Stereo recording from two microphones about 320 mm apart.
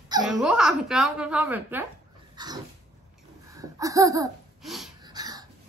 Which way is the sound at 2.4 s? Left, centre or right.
Centre.